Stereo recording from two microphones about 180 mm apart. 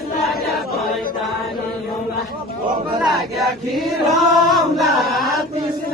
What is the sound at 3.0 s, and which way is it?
Chant, centre (ahead or behind).